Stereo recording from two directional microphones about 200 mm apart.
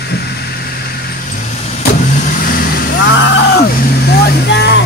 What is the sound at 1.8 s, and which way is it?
Vehicle, 45° left (ahead or behind).